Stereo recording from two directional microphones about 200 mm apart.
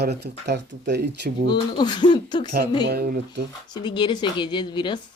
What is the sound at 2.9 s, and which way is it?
Speech, 50° right (ahead or behind).